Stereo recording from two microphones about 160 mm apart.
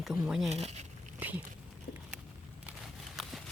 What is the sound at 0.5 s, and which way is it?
Speech, 45° right (ahead or behind).